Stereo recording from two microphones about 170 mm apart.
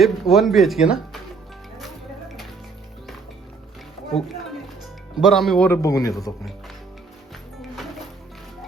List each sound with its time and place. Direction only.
0.0 s speech: centre (ahead or behind)
5.1 s speech: centre (ahead or behind)
5.8 s speech: 20° left (ahead or behind)